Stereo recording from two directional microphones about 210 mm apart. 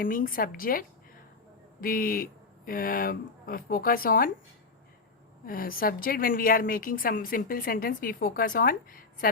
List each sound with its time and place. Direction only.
0.0 s a woman's voice: 40° left (ahead or behind)
5.5 s a woman's voice: 45° left (ahead or behind)